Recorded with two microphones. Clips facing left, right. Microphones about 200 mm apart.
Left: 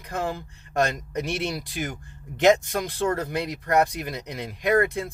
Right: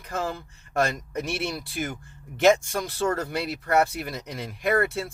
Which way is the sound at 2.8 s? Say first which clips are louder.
Left 1 dB; 15° left (ahead or behind).